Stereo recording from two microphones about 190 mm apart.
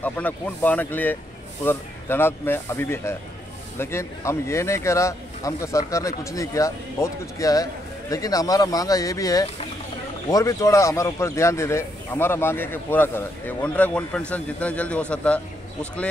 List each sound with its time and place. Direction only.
0.0 s speech: 10° left (ahead or behind)